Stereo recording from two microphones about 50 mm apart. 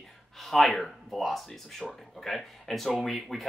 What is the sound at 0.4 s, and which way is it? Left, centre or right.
Speech, centre.